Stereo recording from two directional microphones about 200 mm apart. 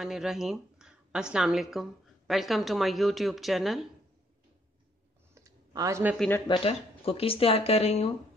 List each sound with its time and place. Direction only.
0.0 s a woman's voice: centre (ahead or behind)
5.3 s clicking: 15° right (ahead or behind)
6.1 s speech: 5° left (ahead or behind)
6.4 s speech: 20° left (ahead or behind)